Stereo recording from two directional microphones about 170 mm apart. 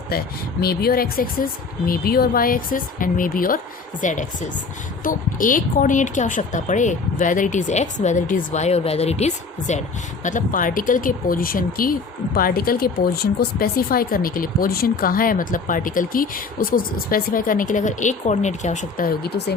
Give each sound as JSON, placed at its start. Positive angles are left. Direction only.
{"t": 0.6, "sound": "speech", "side_deg": 65}